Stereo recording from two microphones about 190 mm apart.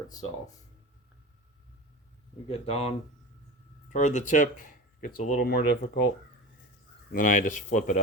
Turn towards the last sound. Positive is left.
turn(degrees=40)  # may be behind; listen again after turning